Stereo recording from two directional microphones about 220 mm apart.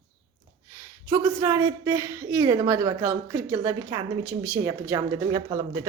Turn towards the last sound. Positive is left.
turn(degrees=-15)  # may be behind; listen again after turning